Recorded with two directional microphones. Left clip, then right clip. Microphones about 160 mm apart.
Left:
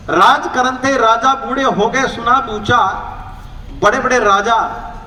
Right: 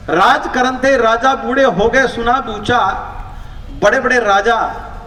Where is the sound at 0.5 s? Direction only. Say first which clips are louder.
Right 1 dB; 55° right (ahead or behind).